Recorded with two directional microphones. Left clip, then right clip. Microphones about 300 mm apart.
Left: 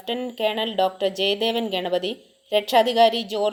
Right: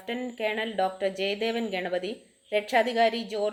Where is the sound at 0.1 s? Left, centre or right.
Left.